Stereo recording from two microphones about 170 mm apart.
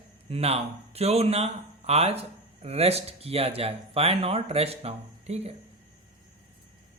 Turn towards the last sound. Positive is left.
turn(degrees=-35)  # may be behind; listen again after turning